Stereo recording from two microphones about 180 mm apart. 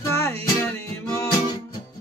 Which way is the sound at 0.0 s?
15° left (ahead or behind).